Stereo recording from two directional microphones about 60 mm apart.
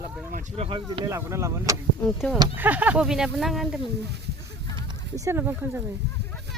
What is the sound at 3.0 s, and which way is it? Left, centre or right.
Speech, centre.